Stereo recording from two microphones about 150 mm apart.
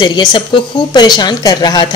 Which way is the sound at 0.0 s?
30° left (ahead or behind).